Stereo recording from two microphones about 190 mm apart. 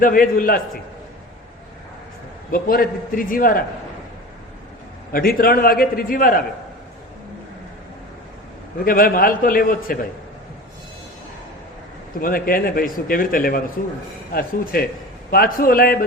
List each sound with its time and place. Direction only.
0.0 s a man's voice: 45° left (ahead or behind)
2.5 s a man's voice: 50° left (ahead or behind)
5.1 s a man's voice: 50° left (ahead or behind)
8.8 s a man's voice: 50° left (ahead or behind)
12.2 s a man's voice: 50° left (ahead or behind)